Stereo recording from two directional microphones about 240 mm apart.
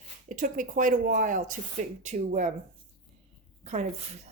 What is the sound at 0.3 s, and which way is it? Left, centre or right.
A woman's voice, right.